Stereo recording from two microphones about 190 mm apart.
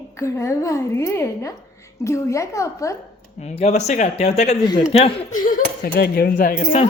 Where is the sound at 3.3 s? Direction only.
35° left (ahead or behind).